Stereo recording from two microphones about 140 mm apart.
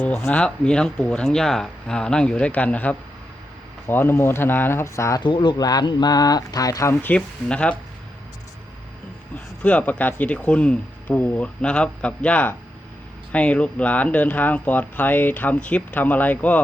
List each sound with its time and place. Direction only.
0.0 s speech: 10° left (ahead or behind)
5.2 s speech: 35° left (ahead or behind); by 7.8 s 10° left (ahead or behind)
9.6 s speech: 10° left (ahead or behind)